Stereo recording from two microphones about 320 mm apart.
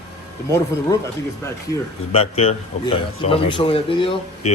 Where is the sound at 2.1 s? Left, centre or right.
Centre.